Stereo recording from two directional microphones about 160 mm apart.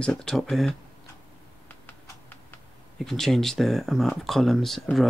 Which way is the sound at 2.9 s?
Centre (ahead or behind).